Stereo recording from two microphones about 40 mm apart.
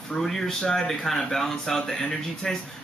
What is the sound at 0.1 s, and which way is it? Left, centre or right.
Speech, centre.